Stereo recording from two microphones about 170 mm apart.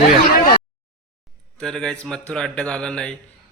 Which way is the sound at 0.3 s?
60° left (ahead or behind).